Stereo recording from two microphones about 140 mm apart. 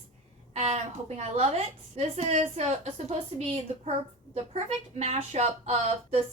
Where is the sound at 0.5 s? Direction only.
50° right (ahead or behind).